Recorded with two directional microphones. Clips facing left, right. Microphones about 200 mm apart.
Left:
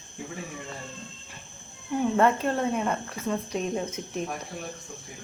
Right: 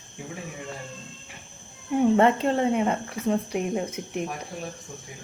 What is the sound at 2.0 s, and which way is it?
Speech, 20° right (ahead or behind).